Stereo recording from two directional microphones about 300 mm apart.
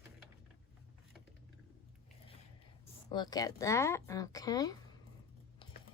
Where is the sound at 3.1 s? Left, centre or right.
Centre.